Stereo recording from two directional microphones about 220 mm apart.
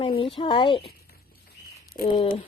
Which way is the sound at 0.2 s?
25° left (ahead or behind).